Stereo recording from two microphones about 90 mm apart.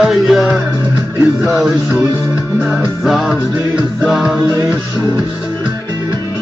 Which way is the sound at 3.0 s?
Centre (ahead or behind).